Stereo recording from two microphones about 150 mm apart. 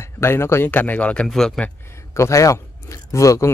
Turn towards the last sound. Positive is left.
turn(degrees=20)  # may be behind; listen again after turning